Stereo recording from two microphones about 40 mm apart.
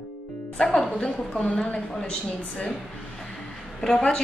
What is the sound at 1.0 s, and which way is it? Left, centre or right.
Speech, left.